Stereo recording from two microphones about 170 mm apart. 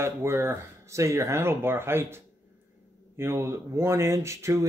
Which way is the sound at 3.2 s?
15° right (ahead or behind).